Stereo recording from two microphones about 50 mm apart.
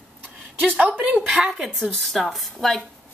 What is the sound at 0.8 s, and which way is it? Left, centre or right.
Speech, right.